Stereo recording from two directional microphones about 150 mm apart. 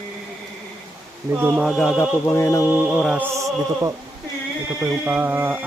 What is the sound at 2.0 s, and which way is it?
Speech, 15° left (ahead or behind).